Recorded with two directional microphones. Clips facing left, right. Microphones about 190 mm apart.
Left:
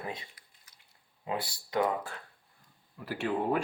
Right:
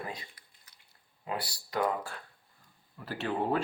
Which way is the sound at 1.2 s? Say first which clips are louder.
Left 2 dB; 20° left (ahead or behind).